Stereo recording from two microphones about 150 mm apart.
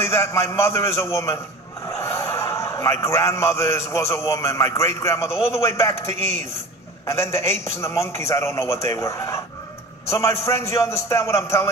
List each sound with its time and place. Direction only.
0.0 s a man's voice: 20° left (ahead or behind)
1.9 s a sound: 20° left (ahead or behind)
3.9 s a man's voice: 20° left (ahead or behind)